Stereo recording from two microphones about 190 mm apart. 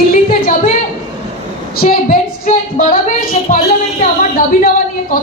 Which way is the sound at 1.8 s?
45° left (ahead or behind).